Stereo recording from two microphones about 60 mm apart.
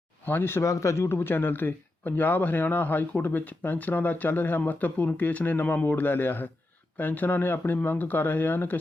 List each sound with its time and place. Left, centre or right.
0.3 s a man's voice: left
0.6 s a man's voice: left